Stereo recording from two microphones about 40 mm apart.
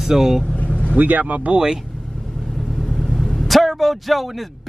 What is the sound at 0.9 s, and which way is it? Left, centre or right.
Speech, right.